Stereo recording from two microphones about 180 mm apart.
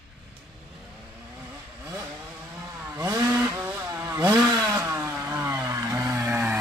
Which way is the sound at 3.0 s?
15° right (ahead or behind).